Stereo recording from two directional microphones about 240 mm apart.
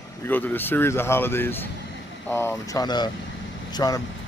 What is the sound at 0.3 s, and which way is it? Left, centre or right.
Speech, centre.